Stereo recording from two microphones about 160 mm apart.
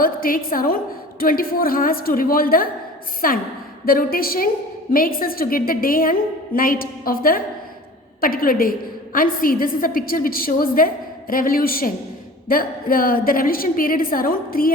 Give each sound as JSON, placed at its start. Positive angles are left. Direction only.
{"t": 0.0, "sound": "a woman's voice", "side_deg": 65}